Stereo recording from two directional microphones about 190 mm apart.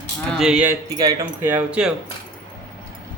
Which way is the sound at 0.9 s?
20° right (ahead or behind).